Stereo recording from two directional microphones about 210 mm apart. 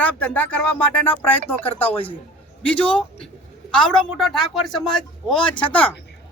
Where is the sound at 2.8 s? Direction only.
25° left (ahead or behind).